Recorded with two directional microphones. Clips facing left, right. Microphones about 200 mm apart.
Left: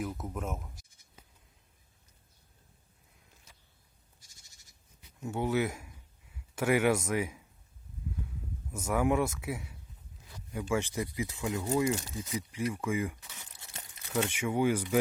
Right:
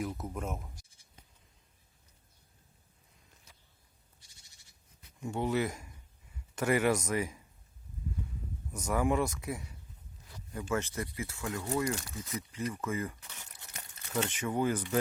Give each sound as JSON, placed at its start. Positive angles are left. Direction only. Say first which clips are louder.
{"t": 0.0, "sound": "speech", "louder": "even", "side_deg": 0}
{"t": 5.2, "sound": "speech", "louder": "left 1 dB", "side_deg": 5}
{"t": 8.7, "sound": "speech", "louder": "left 2 dB", "side_deg": 5}